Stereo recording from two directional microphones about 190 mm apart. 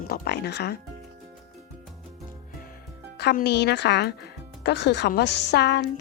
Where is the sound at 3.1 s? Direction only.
60° left (ahead or behind).